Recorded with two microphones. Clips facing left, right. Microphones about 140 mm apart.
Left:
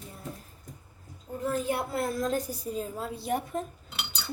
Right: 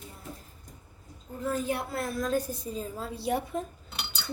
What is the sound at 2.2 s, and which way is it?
Speech, 15° left (ahead or behind).